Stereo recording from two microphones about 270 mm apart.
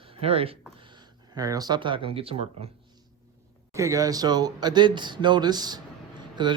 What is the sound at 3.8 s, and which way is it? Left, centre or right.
Speech, centre.